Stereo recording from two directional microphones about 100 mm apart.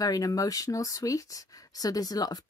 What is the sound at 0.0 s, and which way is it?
Speech, 35° left (ahead or behind).